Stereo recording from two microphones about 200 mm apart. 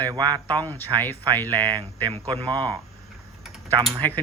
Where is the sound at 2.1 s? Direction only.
25° right (ahead or behind).